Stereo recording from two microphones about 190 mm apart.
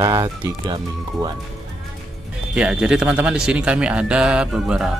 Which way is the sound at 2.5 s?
5° right (ahead or behind).